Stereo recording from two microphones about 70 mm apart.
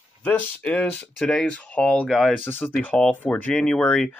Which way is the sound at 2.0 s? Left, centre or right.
Centre.